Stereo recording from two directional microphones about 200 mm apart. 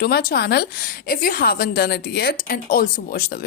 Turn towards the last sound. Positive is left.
turn(degrees=50)  # may be behind; listen again after turning